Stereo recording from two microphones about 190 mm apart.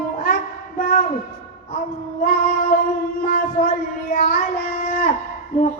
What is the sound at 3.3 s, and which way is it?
Child singing, 45° left (ahead or behind).